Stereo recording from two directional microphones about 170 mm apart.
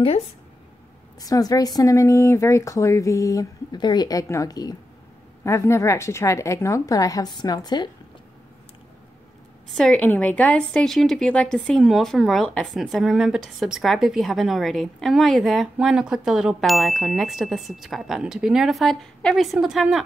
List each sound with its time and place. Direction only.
1.2 s a woman's voice: 20° left (ahead or behind)
9.7 s a woman's voice: 5° left (ahead or behind)